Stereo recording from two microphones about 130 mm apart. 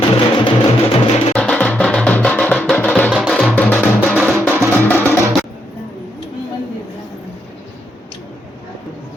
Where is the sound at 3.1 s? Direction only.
Centre (ahead or behind); by 5.1 s 15° left (ahead or behind).